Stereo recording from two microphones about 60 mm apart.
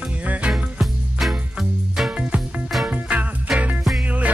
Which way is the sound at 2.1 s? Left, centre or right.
Right.